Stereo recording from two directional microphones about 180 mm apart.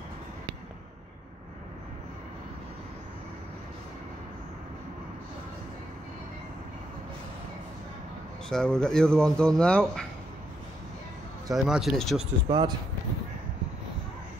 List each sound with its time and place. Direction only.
8.5 s speech: 5° left (ahead or behind)
11.5 s speech: centre (ahead or behind)
12.4 s speech: 25° right (ahead or behind)